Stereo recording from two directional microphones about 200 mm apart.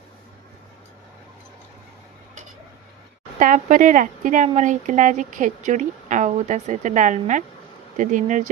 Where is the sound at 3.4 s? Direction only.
40° right (ahead or behind).